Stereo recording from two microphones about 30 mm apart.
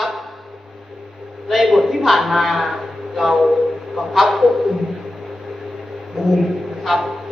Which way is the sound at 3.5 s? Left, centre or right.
Right.